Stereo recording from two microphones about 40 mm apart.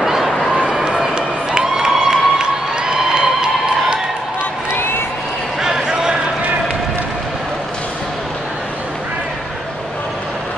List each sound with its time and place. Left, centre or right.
0.0 s run: centre
0.8 s crowd: centre
4.7 s crowd: left
5.6 s a sound: centre